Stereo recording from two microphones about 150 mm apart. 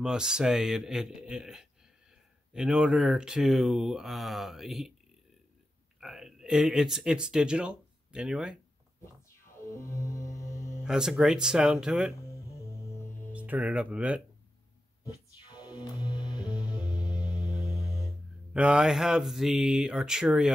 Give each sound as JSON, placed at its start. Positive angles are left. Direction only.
{"t": 0.0, "sound": "speech", "side_deg": -5}
{"t": 5.9, "sound": "speech", "side_deg": 0}
{"t": 9.0, "sound": "music", "side_deg": 20}
{"t": 10.8, "sound": "speech", "side_deg": -5}
{"t": 12.2, "sound": "music", "side_deg": 20}
{"t": 13.3, "sound": "speech", "side_deg": -10}
{"t": 15.4, "sound": "music", "side_deg": 30}
{"t": 18.5, "sound": "speech", "side_deg": -5}